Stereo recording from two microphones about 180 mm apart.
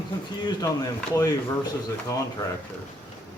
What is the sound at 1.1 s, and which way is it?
Speech, 15° left (ahead or behind).